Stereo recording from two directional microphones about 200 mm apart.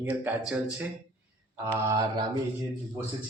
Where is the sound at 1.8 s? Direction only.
15° right (ahead or behind).